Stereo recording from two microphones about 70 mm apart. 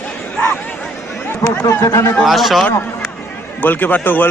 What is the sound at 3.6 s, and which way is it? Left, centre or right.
Speech, left.